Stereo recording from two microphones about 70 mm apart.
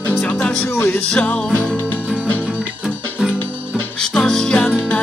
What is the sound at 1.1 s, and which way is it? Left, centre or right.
Music, centre.